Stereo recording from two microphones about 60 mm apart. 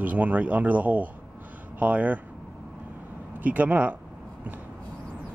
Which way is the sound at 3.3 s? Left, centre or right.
Right.